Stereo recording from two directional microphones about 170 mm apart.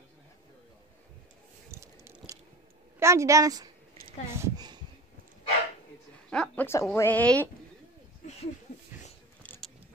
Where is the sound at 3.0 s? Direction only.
15° right (ahead or behind).